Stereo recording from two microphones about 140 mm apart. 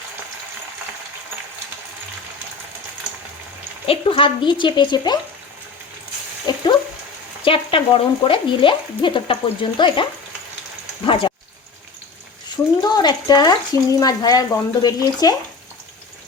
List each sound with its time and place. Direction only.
3.8 s stir: 40° left (ahead or behind)
6.5 s a sound: 30° left (ahead or behind)
7.4 s stir: 40° left (ahead or behind)
11.0 s speech: 40° left (ahead or behind)
12.8 s speech: 30° left (ahead or behind)